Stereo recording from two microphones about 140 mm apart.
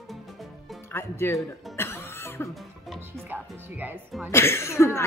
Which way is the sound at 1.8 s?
15° left (ahead or behind).